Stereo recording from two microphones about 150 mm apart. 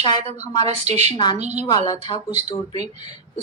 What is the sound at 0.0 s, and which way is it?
Speech, 30° left (ahead or behind).